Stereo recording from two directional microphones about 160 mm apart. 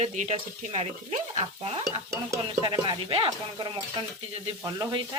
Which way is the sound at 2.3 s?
25° right (ahead or behind).